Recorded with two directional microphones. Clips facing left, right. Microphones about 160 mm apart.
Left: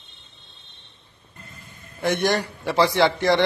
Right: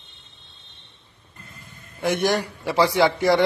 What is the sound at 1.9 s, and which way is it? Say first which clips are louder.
A man's voice: even; 5° right (ahead or behind).